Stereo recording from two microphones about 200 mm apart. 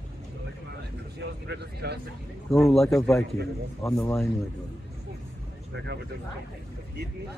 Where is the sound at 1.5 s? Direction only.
55° right (ahead or behind).